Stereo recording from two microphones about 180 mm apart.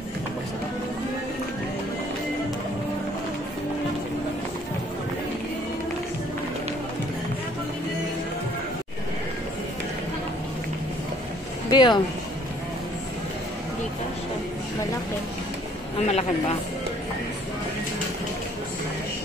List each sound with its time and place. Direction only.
11.7 s speech: 25° left (ahead or behind)
16.1 s a man's voice: 35° left (ahead or behind)